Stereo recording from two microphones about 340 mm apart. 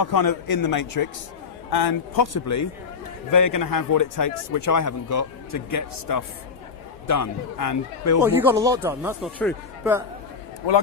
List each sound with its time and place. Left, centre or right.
0.0 s a man's voice: left
0.5 s a man's voice: left
1.7 s a man's voice: left
8.2 s speech: centre